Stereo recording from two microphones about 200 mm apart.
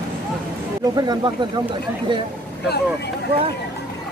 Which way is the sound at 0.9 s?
20° right (ahead or behind).